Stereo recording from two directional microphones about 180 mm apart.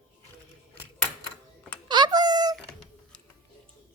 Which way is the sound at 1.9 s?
25° right (ahead or behind).